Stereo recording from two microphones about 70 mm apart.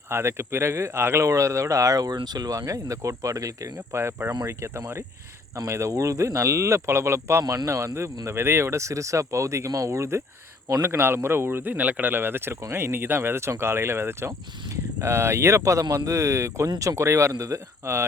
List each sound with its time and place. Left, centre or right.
0.1 s speech: right
3.9 s speech: right
7.4 s speech: right
7.7 s speech: right